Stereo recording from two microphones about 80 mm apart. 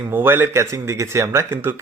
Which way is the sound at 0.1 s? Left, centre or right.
Right.